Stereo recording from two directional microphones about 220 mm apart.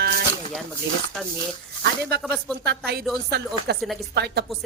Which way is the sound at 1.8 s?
45° right (ahead or behind).